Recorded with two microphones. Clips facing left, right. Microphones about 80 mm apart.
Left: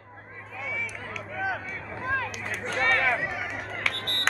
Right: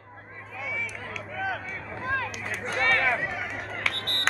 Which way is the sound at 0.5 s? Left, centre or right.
Centre.